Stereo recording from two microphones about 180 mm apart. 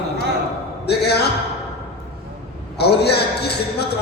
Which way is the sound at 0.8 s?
65° left (ahead or behind).